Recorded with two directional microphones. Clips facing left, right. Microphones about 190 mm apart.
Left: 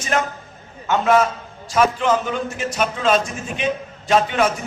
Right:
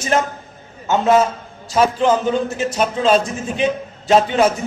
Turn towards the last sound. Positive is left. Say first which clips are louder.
# right 4 dB
turn(degrees=-30)  # may be behind; listen again after turning